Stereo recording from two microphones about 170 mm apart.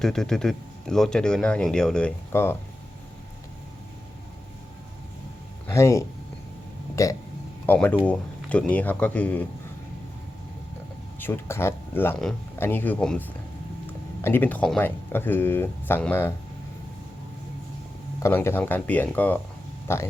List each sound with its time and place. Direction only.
0.0 s speech: 5° left (ahead or behind)
5.6 s speech: 15° left (ahead or behind)
11.2 s speech: 15° left (ahead or behind)
18.2 s speech: 15° left (ahead or behind)